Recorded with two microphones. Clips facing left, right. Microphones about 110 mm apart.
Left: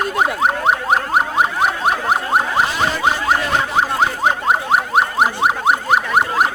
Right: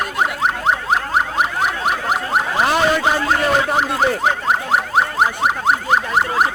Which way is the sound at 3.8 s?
20° left (ahead or behind).